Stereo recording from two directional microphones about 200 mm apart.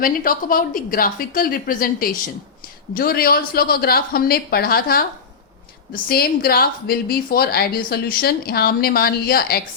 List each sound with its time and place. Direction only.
0.0 s a woman's voice: 45° left (ahead or behind)